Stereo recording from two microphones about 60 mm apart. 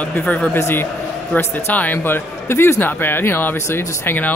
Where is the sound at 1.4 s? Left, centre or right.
Left.